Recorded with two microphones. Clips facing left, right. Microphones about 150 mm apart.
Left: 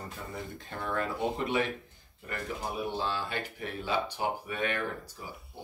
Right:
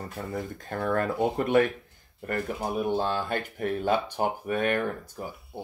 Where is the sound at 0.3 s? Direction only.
50° right (ahead or behind).